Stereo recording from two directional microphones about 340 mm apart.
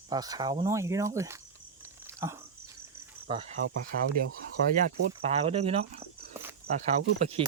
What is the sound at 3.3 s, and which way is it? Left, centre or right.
Speech, centre.